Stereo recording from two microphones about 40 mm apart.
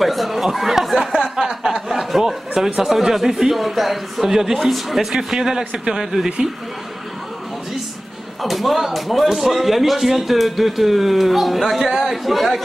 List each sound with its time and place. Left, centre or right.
0.0 s speech: centre
8.4 s speech: centre